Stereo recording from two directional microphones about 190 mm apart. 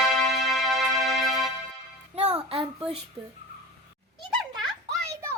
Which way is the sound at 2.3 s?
30° right (ahead or behind).